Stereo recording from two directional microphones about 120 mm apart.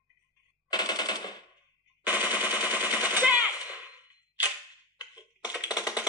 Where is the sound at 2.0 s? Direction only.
15° right (ahead or behind).